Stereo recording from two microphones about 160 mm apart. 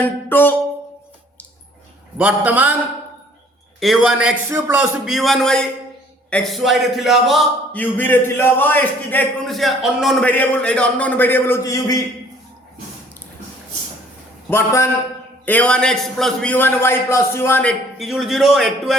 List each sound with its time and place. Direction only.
0.0 s a man's voice: 10° left (ahead or behind)
2.1 s a man's voice: 10° right (ahead or behind)
3.8 s a man's voice: centre (ahead or behind)
5.0 s a man's voice: centre (ahead or behind)
7.7 s a man's voice: 10° left (ahead or behind)
9.6 s a man's voice: centre (ahead or behind); by 12.0 s 20° left (ahead or behind)
14.5 s a man's voice: 15° left (ahead or behind); by 18.9 s centre (ahead or behind)